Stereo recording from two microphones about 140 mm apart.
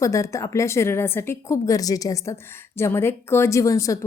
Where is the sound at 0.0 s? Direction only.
20° left (ahead or behind).